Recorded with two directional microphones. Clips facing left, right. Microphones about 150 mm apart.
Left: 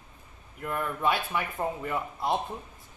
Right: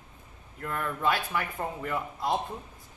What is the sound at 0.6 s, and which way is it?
Speech, 15° left (ahead or behind).